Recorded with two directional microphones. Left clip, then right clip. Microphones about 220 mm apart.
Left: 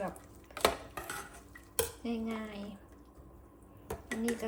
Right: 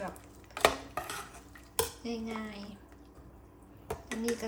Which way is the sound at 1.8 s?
Centre (ahead or behind).